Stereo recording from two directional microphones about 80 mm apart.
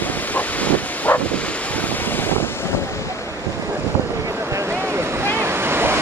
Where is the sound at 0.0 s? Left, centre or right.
Left.